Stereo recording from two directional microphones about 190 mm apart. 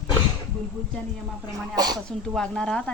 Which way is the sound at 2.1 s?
5° left (ahead or behind).